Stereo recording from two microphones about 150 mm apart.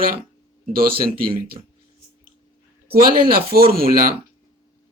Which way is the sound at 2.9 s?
80° right.